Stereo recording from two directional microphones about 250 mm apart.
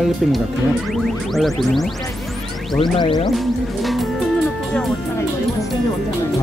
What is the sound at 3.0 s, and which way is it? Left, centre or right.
Music, centre.